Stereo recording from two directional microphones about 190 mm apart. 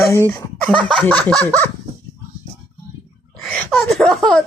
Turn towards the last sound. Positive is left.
turn(degrees=0)  # may be behind; listen again after turning